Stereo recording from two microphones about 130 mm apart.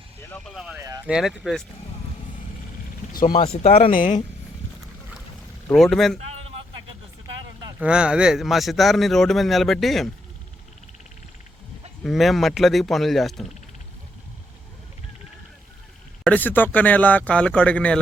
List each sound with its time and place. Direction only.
0.3 s speech: 15° left (ahead or behind)
0.5 s a man's voice: centre (ahead or behind)
0.8 s speech: 25° right (ahead or behind)
1.0 s a man's voice: 5° right (ahead or behind)
3.1 s vehicle: 90° left
3.6 s speech: 55° left (ahead or behind)
3.9 s speech: 85° left
5.6 s a man's voice: 5° left (ahead or behind)
7.8 s a man's voice: 5° right (ahead or behind)
12.0 s a man's voice: centre (ahead or behind)
16.2 s speech: 10° left (ahead or behind)